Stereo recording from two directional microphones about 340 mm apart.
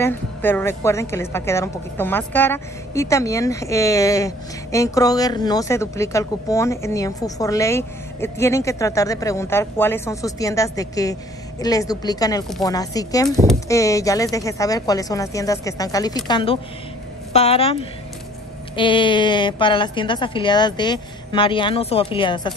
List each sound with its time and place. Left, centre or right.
0.0 s speech: centre
18.8 s speech: centre